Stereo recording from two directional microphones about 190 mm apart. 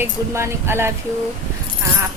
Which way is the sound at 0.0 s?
10° right (ahead or behind).